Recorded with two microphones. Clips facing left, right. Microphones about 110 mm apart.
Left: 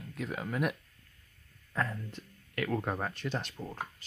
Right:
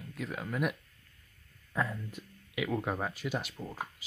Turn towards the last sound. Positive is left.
turn(degrees=-10)  # may be behind; listen again after turning